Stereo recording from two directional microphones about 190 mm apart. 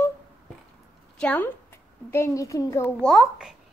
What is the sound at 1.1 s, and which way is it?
A woman's voice, 5° left (ahead or behind).